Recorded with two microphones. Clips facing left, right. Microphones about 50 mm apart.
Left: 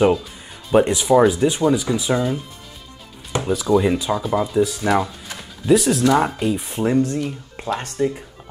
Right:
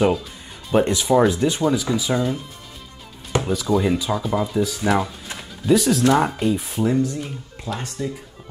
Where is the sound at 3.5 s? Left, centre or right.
Centre.